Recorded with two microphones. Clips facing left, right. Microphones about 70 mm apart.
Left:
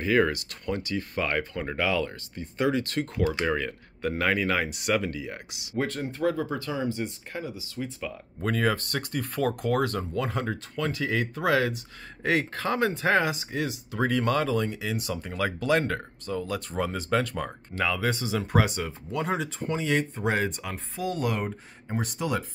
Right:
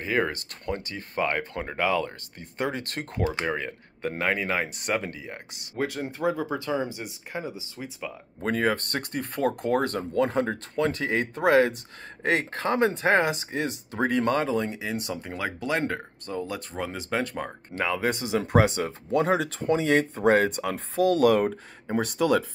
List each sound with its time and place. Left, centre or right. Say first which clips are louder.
0.0 s speech: left 3 dB; right
2.4 s speech: left 4 dB; right
3.2 s speech: even; right
3.4 s speech: left 2 dB; right
4.6 s speech: left 2 dB; right
5.8 s speech: even; centre
6.7 s speech: right 1 dB; right
8.7 s speech: even; right
15.2 s speech: left 7 dB; right
16.7 s speech: left 4 dB; centre
17.2 s speech: even; right
20.7 s speech: right 8 dB; right